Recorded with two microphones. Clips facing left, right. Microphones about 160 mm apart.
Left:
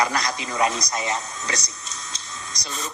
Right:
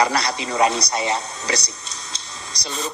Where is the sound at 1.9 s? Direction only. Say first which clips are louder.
Right 1 dB; 35° right (ahead or behind).